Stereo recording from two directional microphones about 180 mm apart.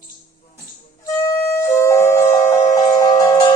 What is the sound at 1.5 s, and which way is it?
Music, 10° left (ahead or behind).